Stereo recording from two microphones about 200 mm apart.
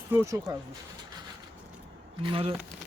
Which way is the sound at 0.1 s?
15° right (ahead or behind).